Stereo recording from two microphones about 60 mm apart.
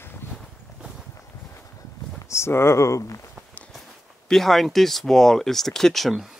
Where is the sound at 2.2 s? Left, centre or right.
Left.